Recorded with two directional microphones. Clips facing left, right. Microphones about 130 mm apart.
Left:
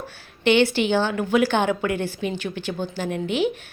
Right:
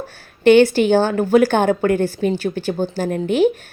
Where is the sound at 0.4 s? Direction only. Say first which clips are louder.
Right 7 dB; 45° right (ahead or behind).